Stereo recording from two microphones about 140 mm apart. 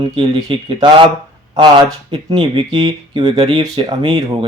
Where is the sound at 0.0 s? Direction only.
35° right (ahead or behind).